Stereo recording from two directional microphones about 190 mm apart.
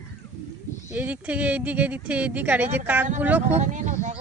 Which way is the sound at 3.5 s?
40° right (ahead or behind).